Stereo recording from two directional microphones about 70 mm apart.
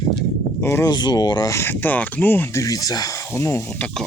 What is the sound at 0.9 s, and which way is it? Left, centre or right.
Speech, left.